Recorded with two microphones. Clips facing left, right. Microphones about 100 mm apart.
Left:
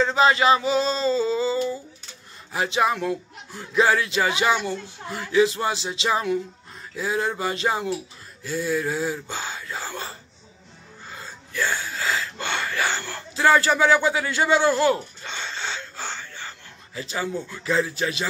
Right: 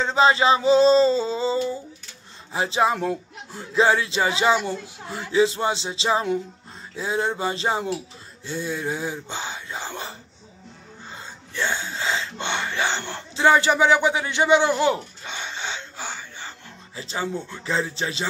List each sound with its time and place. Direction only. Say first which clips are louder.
0.0 s speech: even; 25° right (ahead or behind)
16.4 s speech: right 1 dB; 25° right (ahead or behind)